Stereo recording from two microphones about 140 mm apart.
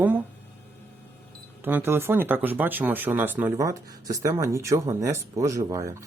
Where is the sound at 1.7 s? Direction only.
15° right (ahead or behind).